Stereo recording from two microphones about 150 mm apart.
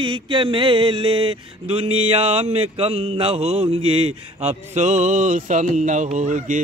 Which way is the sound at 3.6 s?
40° right (ahead or behind).